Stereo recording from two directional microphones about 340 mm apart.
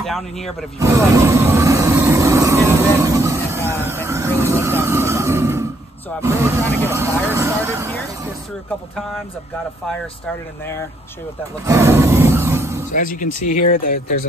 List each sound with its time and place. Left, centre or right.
0.7 s music: centre
6.2 s speech: centre
11.6 s roar: centre
12.9 s speech: left